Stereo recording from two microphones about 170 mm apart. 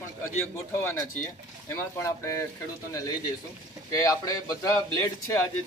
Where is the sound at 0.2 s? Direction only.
15° left (ahead or behind).